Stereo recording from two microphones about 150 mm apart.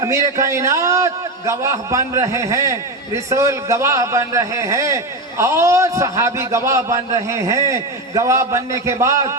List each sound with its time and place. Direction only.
0.0 s a man's voice: 20° right (ahead or behind)